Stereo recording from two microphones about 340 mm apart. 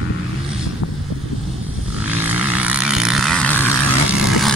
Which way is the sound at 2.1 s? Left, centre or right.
Centre.